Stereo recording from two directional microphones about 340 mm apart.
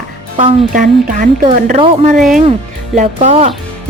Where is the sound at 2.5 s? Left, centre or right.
Right.